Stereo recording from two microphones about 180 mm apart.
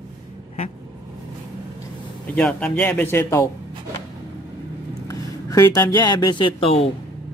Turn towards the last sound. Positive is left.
turn(degrees=30)  # may be behind; listen again after turning